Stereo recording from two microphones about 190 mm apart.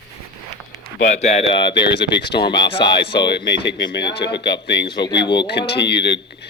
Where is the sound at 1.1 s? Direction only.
35° left (ahead or behind).